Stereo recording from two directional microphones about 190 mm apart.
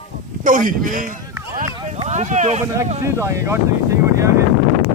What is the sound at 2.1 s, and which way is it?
Speech, 40° right (ahead or behind).